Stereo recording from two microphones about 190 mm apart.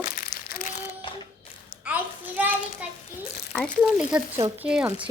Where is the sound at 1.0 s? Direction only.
25° left (ahead or behind).